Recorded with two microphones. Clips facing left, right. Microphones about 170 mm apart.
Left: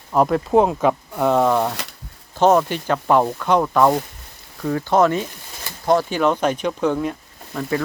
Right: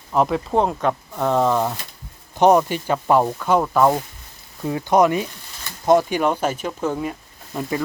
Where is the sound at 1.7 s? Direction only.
75° left (ahead or behind).